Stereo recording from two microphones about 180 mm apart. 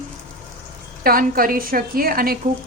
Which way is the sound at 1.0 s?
55° right (ahead or behind).